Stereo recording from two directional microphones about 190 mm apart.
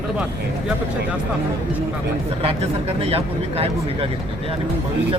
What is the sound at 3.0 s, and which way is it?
Speech, 30° right (ahead or behind).